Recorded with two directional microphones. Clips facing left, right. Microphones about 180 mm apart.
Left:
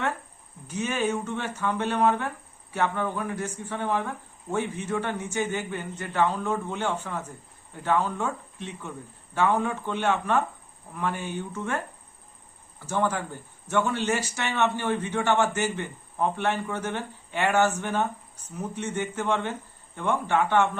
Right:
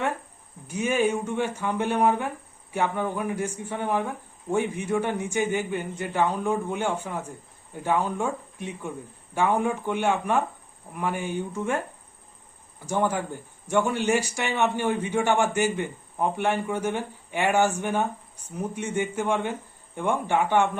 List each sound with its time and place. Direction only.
0.7 s speech: 10° right (ahead or behind)
12.8 s speech: 15° right (ahead or behind)